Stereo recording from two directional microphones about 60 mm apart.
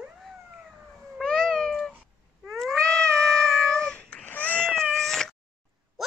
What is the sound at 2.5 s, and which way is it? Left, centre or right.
Cat, centre.